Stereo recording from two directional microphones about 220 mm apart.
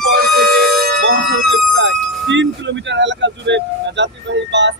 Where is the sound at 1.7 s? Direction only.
55° right (ahead or behind).